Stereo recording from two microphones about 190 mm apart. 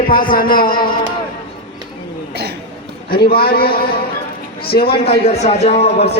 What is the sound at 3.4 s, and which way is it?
A man's voice, 55° left (ahead or behind).